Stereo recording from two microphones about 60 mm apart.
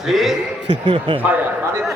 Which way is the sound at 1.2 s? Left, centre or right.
Right.